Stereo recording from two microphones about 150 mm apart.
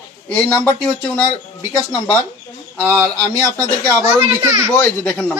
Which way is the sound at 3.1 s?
15° left (ahead or behind).